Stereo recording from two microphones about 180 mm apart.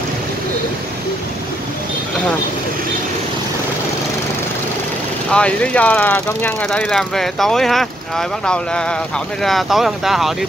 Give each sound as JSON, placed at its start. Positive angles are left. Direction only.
{"t": 5.3, "sound": "speech", "side_deg": 5}